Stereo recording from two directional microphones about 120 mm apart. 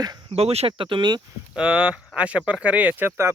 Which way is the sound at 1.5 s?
10° right (ahead or behind).